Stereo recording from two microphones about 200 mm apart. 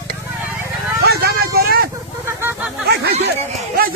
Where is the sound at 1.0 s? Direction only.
50° right (ahead or behind).